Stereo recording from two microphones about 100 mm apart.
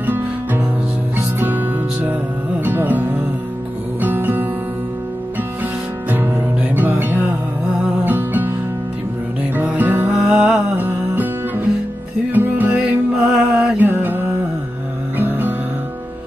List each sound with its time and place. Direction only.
0.0 s music: 15° right (ahead or behind)
6.7 s music: 20° right (ahead or behind)
9.6 s music: 20° right (ahead or behind)
10.1 s music: 10° right (ahead or behind)
10.8 s music: 20° right (ahead or behind)
13.7 s mantra: 20° right (ahead or behind)
15.1 s music: 20° right (ahead or behind)